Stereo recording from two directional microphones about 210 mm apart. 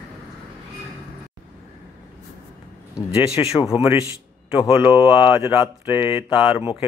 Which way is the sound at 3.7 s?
10° right (ahead or behind).